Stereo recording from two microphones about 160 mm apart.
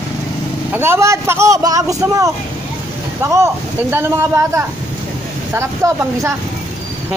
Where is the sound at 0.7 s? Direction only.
15° right (ahead or behind).